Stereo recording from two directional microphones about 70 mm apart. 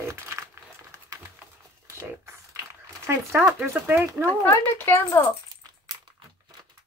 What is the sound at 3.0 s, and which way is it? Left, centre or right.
Speech, right.